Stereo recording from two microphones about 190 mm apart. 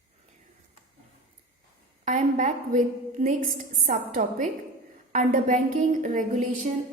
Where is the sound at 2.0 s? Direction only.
40° right (ahead or behind).